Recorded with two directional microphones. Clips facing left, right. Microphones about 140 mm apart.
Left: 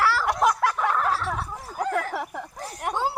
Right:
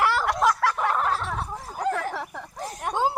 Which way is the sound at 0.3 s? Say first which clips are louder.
Even; 20° left (ahead or behind).